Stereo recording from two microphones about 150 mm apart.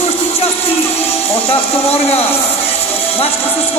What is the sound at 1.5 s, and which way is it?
Speech, 40° left (ahead or behind).